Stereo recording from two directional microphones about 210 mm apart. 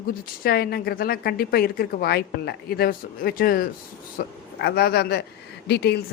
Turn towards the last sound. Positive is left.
turn(degrees=55)  # may be behind; listen again after turning